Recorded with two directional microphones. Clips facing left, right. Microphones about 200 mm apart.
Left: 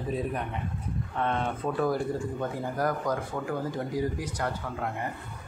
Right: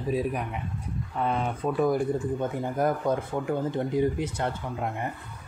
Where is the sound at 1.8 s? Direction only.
20° right (ahead or behind).